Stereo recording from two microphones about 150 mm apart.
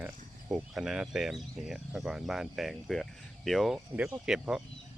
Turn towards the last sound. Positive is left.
turn(degrees=-5)  # may be behind; listen again after turning